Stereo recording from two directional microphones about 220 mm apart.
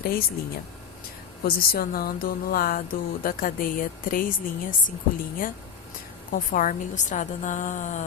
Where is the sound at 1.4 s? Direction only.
40° left (ahead or behind).